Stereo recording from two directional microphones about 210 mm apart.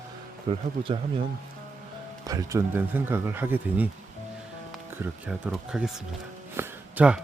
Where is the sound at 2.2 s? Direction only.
15° right (ahead or behind).